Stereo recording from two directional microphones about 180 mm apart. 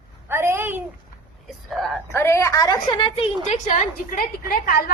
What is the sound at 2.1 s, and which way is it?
A woman's voice, 15° left (ahead or behind).